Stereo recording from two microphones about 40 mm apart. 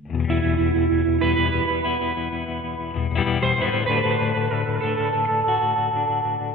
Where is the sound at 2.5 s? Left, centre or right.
Left.